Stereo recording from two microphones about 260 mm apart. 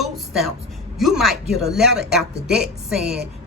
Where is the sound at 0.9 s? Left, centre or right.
Centre.